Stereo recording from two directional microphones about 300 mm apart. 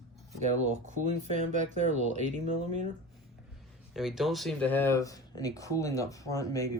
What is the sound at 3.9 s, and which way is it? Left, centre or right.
Speech, centre.